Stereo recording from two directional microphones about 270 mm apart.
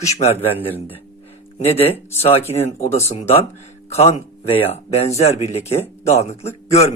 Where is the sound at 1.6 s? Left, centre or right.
Left.